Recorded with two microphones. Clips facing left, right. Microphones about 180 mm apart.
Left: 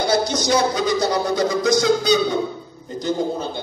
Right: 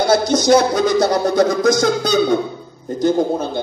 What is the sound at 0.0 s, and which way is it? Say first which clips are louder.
Speech: right 5 dB; 50° right (ahead or behind).